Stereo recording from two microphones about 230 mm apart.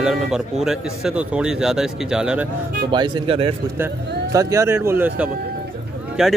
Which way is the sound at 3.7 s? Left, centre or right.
Centre.